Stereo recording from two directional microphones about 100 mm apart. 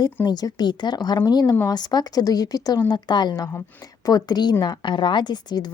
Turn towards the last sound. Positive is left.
turn(degrees=45)  # may be behind; listen again after turning